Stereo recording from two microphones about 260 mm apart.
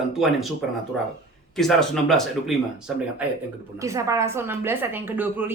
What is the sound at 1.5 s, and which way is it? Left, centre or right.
A man's voice, centre.